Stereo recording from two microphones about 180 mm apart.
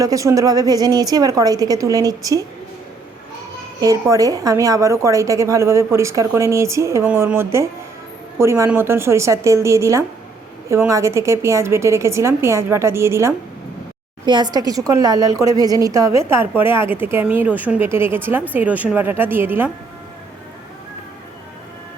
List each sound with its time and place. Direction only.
0.0 s a woman's voice: 20° right (ahead or behind)
3.8 s a woman's voice: 20° right (ahead or behind)